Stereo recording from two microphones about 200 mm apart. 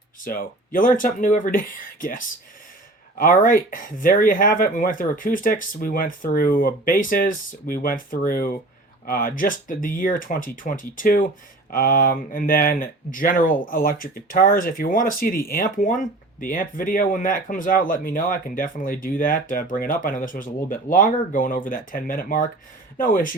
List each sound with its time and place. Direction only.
0.3 s speech: 45° left (ahead or behind)